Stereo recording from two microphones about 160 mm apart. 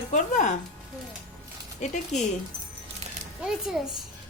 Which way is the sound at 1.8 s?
45° left (ahead or behind).